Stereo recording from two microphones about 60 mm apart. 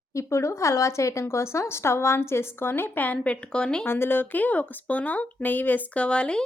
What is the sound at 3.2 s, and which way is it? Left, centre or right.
Speech, centre.